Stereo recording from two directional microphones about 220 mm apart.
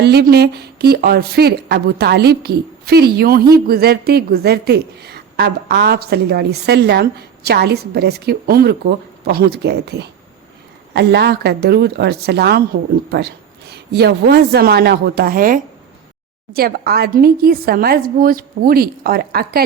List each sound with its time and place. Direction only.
0.0 s a woman's voice: 45° right (ahead or behind)